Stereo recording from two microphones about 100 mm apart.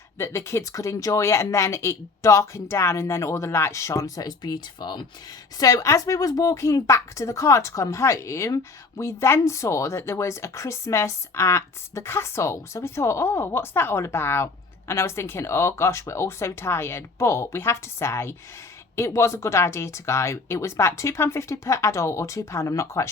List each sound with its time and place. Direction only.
0.2 s a woman's voice: 25° left (ahead or behind); by 5.0 s 50° left (ahead or behind)
5.5 s a woman's voice: 35° left (ahead or behind)